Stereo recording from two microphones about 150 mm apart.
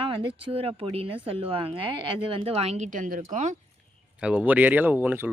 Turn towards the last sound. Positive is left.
turn(degrees=-10)  # may be behind; listen again after turning